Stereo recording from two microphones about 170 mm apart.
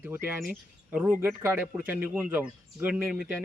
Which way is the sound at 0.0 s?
10° right (ahead or behind).